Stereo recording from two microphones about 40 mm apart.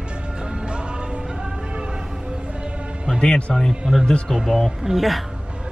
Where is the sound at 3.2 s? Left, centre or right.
Left.